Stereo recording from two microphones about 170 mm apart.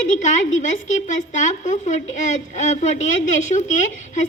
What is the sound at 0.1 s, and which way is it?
A woman's voice, 45° left (ahead or behind).